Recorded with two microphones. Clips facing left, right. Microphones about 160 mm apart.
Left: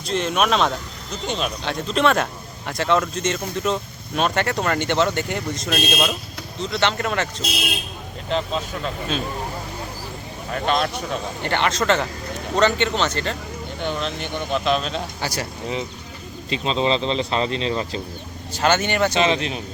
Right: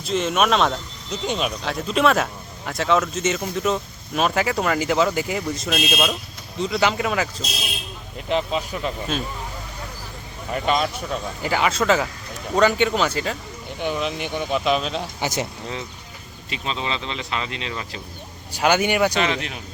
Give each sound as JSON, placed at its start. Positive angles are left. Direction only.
{"t": 0.0, "sound": "speech", "side_deg": 0}
{"t": 10.5, "sound": "speech", "side_deg": -5}
{"t": 15.2, "sound": "speech", "side_deg": -20}
{"t": 16.5, "sound": "speech", "side_deg": 30}
{"t": 18.5, "sound": "speech", "side_deg": -10}
{"t": 19.1, "sound": "speech", "side_deg": 20}